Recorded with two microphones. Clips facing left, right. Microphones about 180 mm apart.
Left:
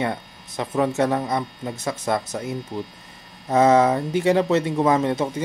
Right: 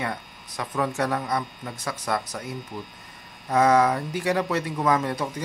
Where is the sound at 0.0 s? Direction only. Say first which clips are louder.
Left 5 dB; 25° left (ahead or behind).